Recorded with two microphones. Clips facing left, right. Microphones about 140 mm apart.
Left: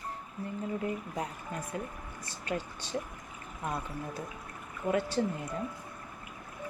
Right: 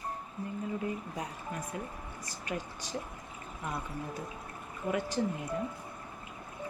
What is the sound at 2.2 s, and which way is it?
Speech, 30° left (ahead or behind).